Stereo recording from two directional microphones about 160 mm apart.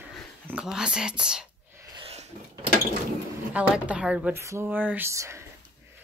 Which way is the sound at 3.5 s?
10° right (ahead or behind).